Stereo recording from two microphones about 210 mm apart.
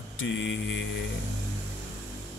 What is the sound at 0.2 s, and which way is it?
Speech, 60° left (ahead or behind).